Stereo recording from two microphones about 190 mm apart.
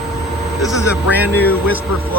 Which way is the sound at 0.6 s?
20° left (ahead or behind).